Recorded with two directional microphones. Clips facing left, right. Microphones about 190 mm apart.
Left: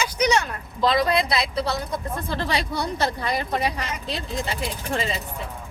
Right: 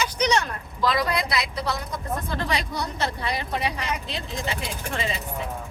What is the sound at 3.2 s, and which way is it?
Speech, 45° left (ahead or behind).